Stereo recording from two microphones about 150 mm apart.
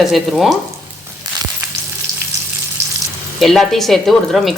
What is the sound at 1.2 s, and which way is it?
Frying, 25° right (ahead or behind).